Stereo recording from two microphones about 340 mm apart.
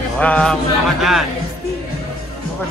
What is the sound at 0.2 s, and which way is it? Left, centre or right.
Speech, centre.